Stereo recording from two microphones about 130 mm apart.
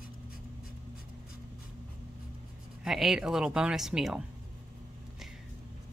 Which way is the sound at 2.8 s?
5° right (ahead or behind).